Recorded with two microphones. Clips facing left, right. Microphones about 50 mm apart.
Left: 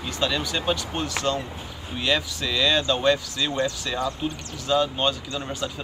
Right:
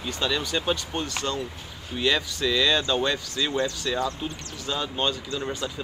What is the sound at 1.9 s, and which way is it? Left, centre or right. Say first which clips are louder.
Speech: even; centre.